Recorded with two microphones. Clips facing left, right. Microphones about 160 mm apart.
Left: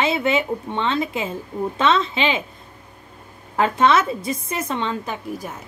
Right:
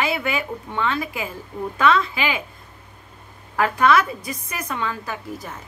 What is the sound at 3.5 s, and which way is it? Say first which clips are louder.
Speech: left 1 dB; 25° left (ahead or behind).